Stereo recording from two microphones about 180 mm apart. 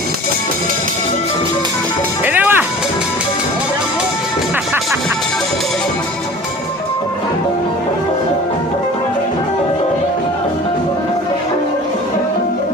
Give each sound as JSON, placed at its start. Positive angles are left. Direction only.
{"t": 2.2, "sound": "music", "side_deg": -10}